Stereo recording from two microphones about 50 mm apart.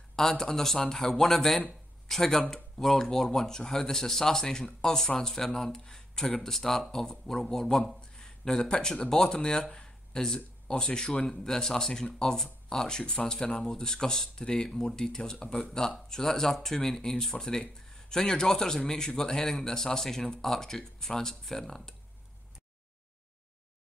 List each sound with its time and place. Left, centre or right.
0.1 s speech: centre